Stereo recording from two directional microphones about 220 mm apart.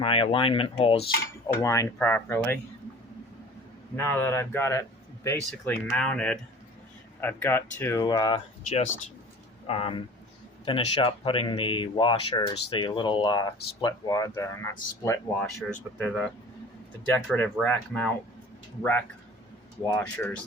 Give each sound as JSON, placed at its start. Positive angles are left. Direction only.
{"t": 0.0, "sound": "speech", "side_deg": 25}
{"t": 1.6, "sound": "speech", "side_deg": 15}
{"t": 3.9, "sound": "speech", "side_deg": 10}